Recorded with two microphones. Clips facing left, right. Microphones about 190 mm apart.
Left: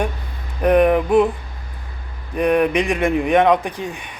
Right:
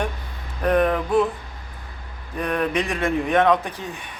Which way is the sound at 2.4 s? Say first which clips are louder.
Left 7 dB; 15° left (ahead or behind).